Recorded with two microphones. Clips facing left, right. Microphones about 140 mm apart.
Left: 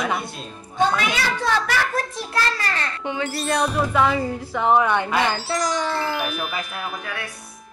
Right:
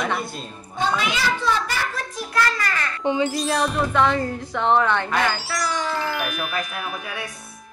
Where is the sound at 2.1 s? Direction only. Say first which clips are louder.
Right 1 dB; 30° left (ahead or behind).